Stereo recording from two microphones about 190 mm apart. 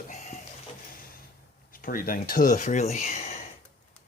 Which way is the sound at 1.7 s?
50° left (ahead or behind).